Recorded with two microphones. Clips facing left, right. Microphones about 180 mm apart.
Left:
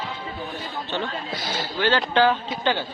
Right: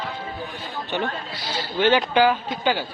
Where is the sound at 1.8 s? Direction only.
20° right (ahead or behind).